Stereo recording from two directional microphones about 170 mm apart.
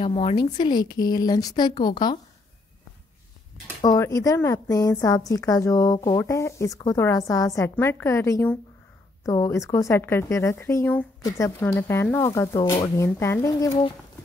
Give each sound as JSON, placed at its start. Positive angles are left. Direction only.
{"t": 0.0, "sound": "a woman's voice", "side_deg": 35}
{"t": 3.8, "sound": "a woman's voice", "side_deg": 20}